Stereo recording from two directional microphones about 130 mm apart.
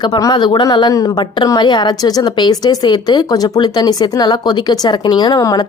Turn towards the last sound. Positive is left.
turn(degrees=30)  # may be behind; listen again after turning